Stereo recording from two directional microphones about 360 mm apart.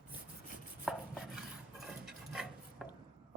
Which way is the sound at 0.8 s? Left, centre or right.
Centre.